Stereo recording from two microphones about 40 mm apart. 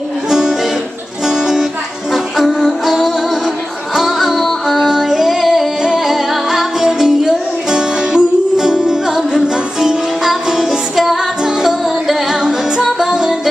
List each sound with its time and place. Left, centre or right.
0.3 s music: centre
4.8 s singing: centre
5.9 s music: centre
11.8 s music: centre